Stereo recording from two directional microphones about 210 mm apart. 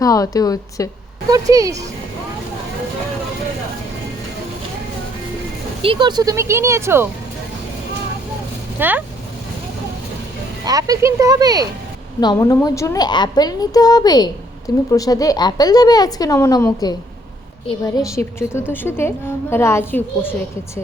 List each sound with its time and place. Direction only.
0.0 s a woman's voice: 15° left (ahead or behind)
1.3 s speech: 15° right (ahead or behind)
5.8 s speech: 25° right (ahead or behind)
8.8 s speech: 10° right (ahead or behind)
10.7 s speech: 15° right (ahead or behind)
12.2 s a woman's voice: 20° left (ahead or behind)